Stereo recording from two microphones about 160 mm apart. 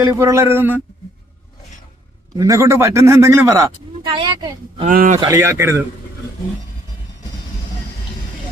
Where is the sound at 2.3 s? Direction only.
20° right (ahead or behind).